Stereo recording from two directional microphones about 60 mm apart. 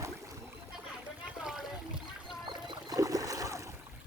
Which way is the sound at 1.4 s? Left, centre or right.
Centre.